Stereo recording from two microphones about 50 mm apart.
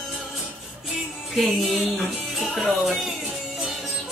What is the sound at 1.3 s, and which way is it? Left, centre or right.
Music, centre.